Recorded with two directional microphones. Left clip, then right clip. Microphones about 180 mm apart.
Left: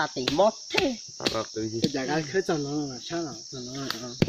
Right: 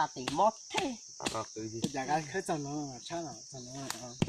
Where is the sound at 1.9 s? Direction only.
35° right (ahead or behind).